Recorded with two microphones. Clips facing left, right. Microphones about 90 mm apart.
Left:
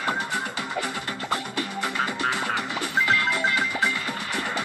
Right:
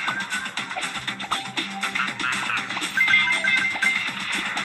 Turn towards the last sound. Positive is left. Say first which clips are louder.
# left 1 dB
turn(degrees=10)  # may be behind; listen again after turning